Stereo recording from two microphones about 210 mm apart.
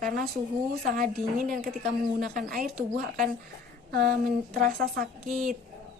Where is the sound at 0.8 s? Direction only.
45° right (ahead or behind).